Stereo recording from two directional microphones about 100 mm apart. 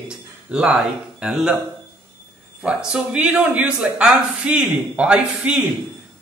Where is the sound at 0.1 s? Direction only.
5° right (ahead or behind).